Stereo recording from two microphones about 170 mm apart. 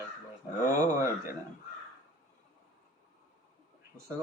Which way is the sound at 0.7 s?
20° right (ahead or behind).